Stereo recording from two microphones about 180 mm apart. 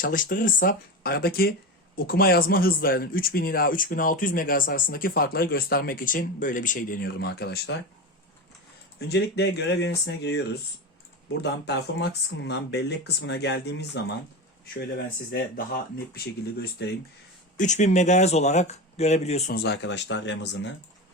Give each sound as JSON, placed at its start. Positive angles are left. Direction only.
{"t": 0.0, "sound": "speech", "side_deg": 50}
{"t": 9.0, "sound": "speech", "side_deg": 65}
{"t": 14.7, "sound": "speech", "side_deg": 60}
{"t": 17.6, "sound": "speech", "side_deg": 40}
{"t": 19.5, "sound": "speech", "side_deg": 70}